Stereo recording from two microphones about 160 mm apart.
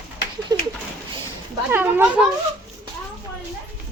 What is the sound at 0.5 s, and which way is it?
Pigeon, 25° right (ahead or behind).